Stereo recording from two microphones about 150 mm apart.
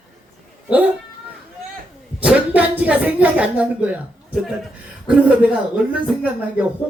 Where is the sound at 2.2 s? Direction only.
10° right (ahead or behind).